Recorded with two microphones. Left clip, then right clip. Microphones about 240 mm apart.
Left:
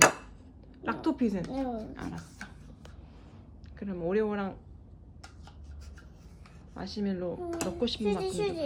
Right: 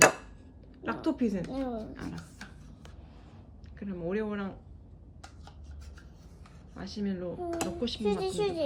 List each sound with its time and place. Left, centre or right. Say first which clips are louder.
0.0 s a sound: even; centre
0.8 s speech: left 1 dB; centre
3.8 s speech: left 4 dB; centre
6.8 s speech: left 2 dB; centre